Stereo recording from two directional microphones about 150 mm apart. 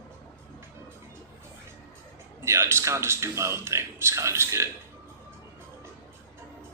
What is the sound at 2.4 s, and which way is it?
A man's voice, 15° right (ahead or behind).